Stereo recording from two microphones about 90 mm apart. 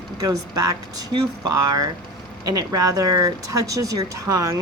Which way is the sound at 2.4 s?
45° right (ahead or behind).